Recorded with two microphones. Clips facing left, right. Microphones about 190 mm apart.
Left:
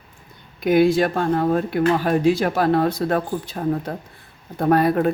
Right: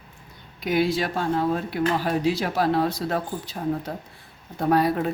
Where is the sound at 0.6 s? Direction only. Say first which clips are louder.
Left 7 dB; 50° left (ahead or behind).